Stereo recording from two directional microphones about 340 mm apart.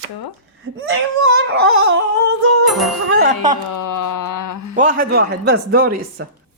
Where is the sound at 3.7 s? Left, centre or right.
Left.